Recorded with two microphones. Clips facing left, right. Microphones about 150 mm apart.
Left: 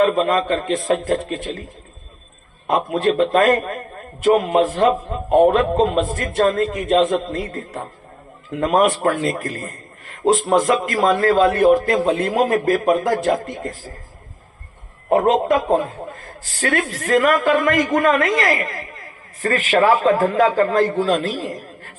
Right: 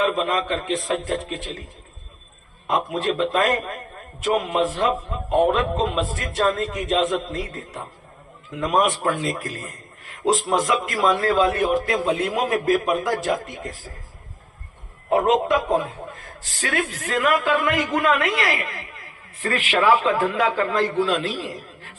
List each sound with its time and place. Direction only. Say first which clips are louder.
0.0 s a man's voice: left 5 dB; 55° left (ahead or behind)
2.9 s a man's voice: left 8 dB; 55° left (ahead or behind)
15.1 s a man's voice: left 3 dB; 50° left (ahead or behind)